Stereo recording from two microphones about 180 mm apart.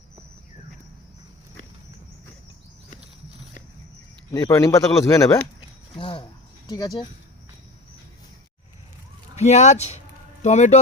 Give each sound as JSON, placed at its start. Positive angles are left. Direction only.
{"t": 4.3, "sound": "speech", "side_deg": 15}
{"t": 5.5, "sound": "a sound", "side_deg": 30}
{"t": 6.7, "sound": "speech", "side_deg": 20}
{"t": 9.3, "sound": "speech", "side_deg": 40}